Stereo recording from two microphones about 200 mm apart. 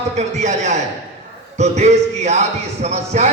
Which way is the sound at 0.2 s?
35° right (ahead or behind).